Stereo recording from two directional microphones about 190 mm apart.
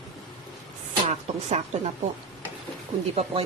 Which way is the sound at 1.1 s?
40° right (ahead or behind).